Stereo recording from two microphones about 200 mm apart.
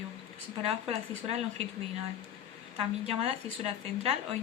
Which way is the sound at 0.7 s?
30° right (ahead or behind).